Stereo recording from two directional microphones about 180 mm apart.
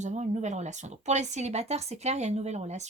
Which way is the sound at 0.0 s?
40° right (ahead or behind).